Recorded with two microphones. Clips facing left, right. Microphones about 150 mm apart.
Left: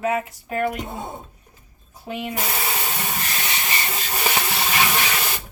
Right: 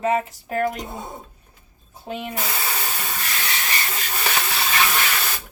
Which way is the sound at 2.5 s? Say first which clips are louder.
Left 2 dB; 20° left (ahead or behind).